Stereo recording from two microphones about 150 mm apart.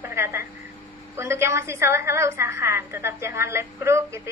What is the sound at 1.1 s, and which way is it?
A woman's voice, 15° right (ahead or behind).